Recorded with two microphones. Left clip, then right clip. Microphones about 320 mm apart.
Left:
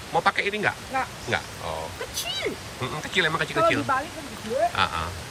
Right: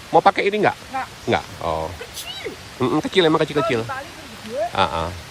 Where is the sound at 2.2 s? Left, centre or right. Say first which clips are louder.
Left 5 dB; centre.